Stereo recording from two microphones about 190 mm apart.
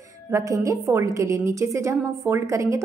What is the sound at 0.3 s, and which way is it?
A woman's voice, 15° right (ahead or behind).